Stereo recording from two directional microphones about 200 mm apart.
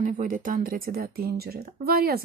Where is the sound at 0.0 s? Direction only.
40° right (ahead or behind).